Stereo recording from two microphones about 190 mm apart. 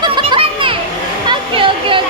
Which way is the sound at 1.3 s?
25° right (ahead or behind).